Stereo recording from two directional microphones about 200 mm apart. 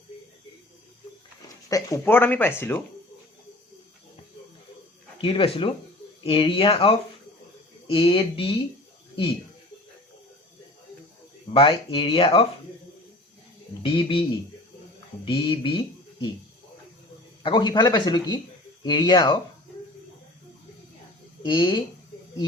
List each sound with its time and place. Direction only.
1.7 s speech: 15° left (ahead or behind)
5.2 s speech: 25° left (ahead or behind)
11.5 s speech: 25° left (ahead or behind)
13.8 s speech: 25° left (ahead or behind)
17.4 s speech: 25° left (ahead or behind)
21.4 s speech: 25° left (ahead or behind)